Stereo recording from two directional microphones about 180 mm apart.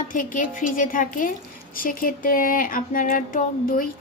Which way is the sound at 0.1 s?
45° left (ahead or behind).